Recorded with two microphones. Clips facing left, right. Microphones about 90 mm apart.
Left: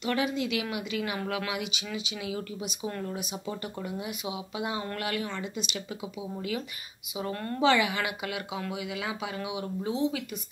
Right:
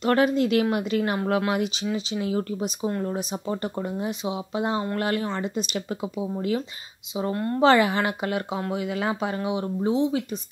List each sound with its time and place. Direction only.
0.0 s a woman's voice: 45° right (ahead or behind)
7.2 s speech: 30° right (ahead or behind)
7.6 s a woman's voice: 40° right (ahead or behind)